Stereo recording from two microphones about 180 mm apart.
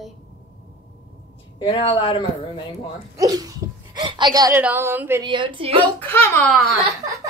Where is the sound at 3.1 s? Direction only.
20° right (ahead or behind).